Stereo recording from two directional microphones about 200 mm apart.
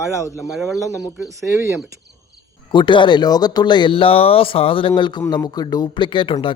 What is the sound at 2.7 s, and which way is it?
Speech, 25° left (ahead or behind).